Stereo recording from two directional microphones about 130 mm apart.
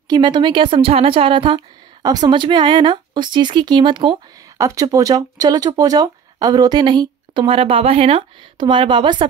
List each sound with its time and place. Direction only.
0.1 s a woman's voice: 35° right (ahead or behind)
2.0 s speech: 30° right (ahead or behind)
4.6 s speech: 25° right (ahead or behind)